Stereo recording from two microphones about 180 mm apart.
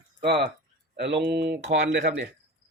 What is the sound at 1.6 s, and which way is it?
Speech, 90° right.